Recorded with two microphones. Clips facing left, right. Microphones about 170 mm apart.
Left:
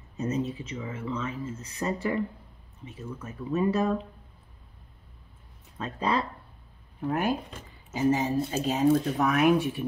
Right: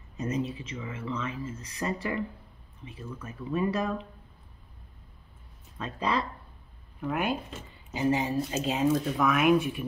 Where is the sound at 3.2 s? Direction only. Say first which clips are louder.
Left 2 dB; 25° left (ahead or behind).